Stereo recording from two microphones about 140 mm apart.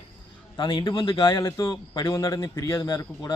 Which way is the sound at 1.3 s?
25° left (ahead or behind).